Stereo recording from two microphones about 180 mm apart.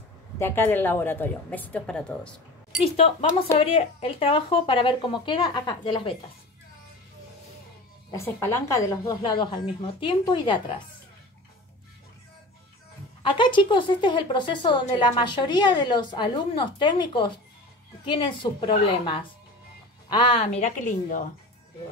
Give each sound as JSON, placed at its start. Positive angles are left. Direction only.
{"t": 0.4, "sound": "a woman's voice", "side_deg": 10}
{"t": 2.8, "sound": "a woman's voice", "side_deg": 35}
{"t": 8.1, "sound": "a woman's voice", "side_deg": 15}
{"t": 13.3, "sound": "a woman's voice", "side_deg": 25}
{"t": 20.1, "sound": "a woman's voice", "side_deg": 25}